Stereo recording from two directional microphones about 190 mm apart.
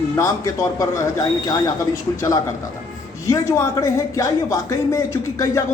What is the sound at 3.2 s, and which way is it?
Speech, 15° left (ahead or behind).